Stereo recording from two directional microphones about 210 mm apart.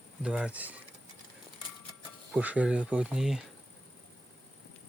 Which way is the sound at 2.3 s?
5° right (ahead or behind).